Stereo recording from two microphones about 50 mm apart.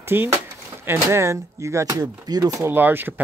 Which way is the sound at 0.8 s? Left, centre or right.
Right.